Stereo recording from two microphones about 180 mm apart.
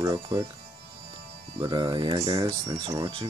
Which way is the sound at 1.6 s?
25° right (ahead or behind).